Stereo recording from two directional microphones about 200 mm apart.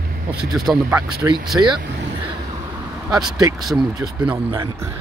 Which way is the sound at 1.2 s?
15° right (ahead or behind).